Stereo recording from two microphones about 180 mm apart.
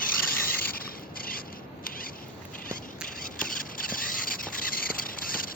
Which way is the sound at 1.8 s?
50° left (ahead or behind).